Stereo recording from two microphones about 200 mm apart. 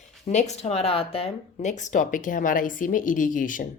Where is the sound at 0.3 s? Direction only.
35° left (ahead or behind).